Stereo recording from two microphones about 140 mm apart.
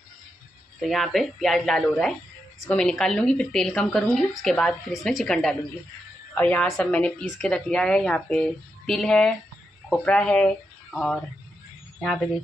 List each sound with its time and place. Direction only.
0.7 s a woman's voice: centre (ahead or behind)